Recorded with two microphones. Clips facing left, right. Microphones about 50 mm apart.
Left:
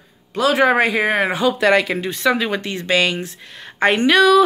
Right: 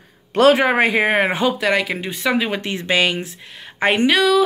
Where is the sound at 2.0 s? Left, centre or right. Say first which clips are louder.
Left 2 dB; centre.